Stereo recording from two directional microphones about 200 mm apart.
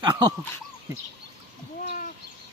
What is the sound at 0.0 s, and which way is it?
Speech, 20° right (ahead or behind).